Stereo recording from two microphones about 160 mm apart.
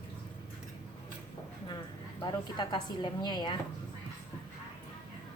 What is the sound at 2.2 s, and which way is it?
A woman's voice, 30° left (ahead or behind).